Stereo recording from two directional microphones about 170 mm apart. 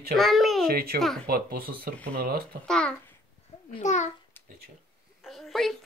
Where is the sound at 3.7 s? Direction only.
45° left (ahead or behind).